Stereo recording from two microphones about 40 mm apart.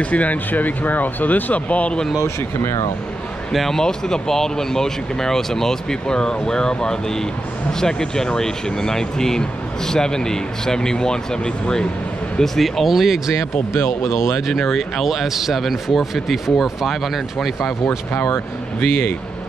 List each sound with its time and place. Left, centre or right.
0.0 s speech: left
3.5 s speech: centre
12.5 s speech: centre
13.7 s speech: left
14.5 s speech: centre
17.8 s speech: left